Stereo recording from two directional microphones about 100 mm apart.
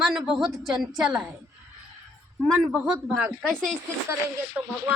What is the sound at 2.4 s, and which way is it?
Speech, 10° right (ahead or behind).